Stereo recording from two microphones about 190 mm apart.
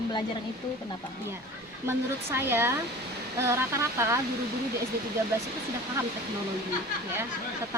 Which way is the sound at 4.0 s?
15° right (ahead or behind).